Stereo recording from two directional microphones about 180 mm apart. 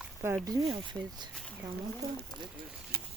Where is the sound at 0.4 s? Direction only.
25° right (ahead or behind).